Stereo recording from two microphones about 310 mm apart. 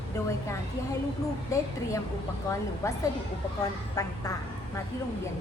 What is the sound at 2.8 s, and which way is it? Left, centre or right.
A woman's voice, centre.